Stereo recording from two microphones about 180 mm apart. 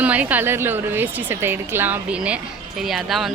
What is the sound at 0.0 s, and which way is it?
A woman's voice, 10° right (ahead or behind).